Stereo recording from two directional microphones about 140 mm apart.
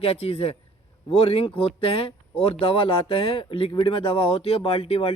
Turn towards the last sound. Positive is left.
turn(degrees=45)  # may be behind; listen again after turning